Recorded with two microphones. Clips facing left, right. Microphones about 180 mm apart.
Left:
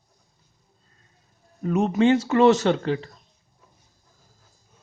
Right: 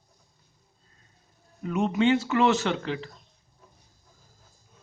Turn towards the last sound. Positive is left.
turn(degrees=35)  # may be behind; listen again after turning